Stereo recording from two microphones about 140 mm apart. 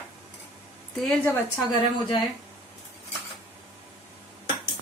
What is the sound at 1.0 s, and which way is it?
Speech, 10° left (ahead or behind).